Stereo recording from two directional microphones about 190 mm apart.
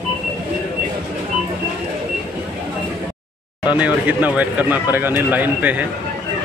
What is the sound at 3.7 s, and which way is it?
Speech, 5° right (ahead or behind).